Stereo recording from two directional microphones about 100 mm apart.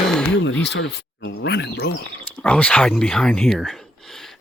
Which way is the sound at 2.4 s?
10° left (ahead or behind).